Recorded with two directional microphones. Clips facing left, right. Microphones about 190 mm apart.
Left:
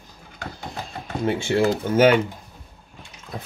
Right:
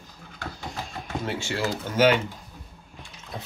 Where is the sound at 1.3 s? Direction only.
55° left (ahead or behind).